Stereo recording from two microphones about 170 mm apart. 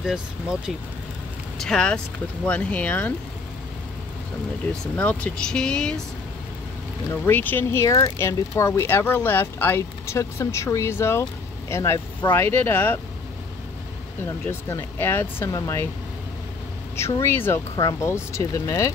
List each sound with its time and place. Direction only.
0.0 s speech: 5° right (ahead or behind)
4.9 s speech: 5° left (ahead or behind)
7.2 s speech: 10° left (ahead or behind)
14.2 s speech: 15° left (ahead or behind)
16.9 s speech: 15° left (ahead or behind)